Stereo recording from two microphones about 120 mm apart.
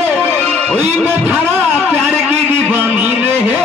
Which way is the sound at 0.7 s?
15° right (ahead or behind).